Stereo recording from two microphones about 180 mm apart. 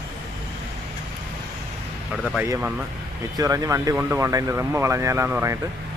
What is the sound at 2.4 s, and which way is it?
Speech, 10° right (ahead or behind).